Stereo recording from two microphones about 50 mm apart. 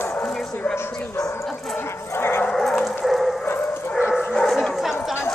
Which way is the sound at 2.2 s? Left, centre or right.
Left.